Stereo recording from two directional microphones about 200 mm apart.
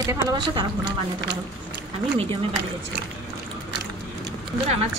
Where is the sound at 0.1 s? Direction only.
20° right (ahead or behind).